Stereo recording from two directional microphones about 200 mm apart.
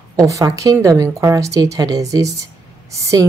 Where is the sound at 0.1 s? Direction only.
15° right (ahead or behind).